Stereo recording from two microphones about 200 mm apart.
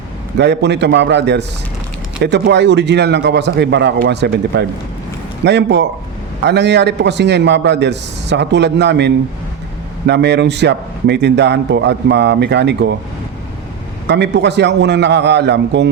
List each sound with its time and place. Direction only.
0.3 s a man's voice: 60° right (ahead or behind)
14.1 s a man's voice: 60° right (ahead or behind)